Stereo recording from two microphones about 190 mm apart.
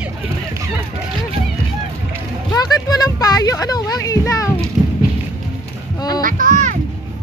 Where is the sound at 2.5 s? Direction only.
20° left (ahead or behind).